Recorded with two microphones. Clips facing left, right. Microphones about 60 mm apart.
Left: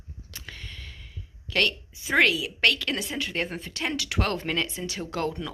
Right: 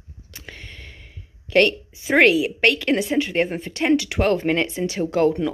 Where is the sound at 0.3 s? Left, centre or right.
Right.